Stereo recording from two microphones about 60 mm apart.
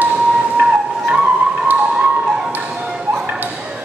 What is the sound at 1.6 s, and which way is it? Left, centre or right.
Music, centre.